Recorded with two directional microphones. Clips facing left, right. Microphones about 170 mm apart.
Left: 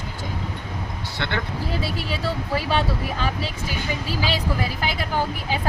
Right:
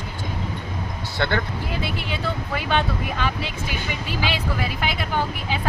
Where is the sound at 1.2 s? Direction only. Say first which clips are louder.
Right 5 dB; 45° right (ahead or behind).